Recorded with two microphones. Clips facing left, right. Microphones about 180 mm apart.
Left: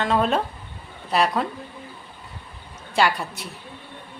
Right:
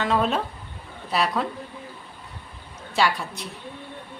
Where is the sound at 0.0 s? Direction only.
Centre (ahead or behind).